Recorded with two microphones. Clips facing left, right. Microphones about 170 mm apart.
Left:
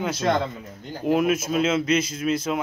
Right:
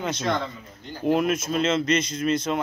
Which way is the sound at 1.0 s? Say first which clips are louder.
Left 1 dB; 5° left (ahead or behind).